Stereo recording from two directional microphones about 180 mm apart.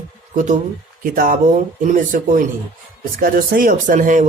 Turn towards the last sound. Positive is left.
turn(degrees=-45)  # may be behind; listen again after turning